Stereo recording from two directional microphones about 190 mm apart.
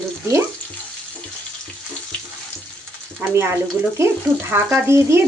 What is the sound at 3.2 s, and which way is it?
Speech, 10° right (ahead or behind).